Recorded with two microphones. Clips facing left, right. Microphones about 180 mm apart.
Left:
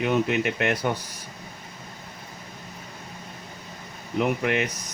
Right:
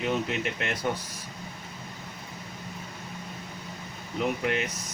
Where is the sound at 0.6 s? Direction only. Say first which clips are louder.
Left 7 dB; 70° left (ahead or behind).